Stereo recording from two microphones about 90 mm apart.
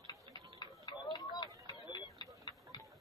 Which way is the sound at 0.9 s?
55° left (ahead or behind).